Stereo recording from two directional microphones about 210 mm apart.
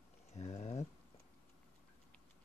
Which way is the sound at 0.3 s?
30° left (ahead or behind).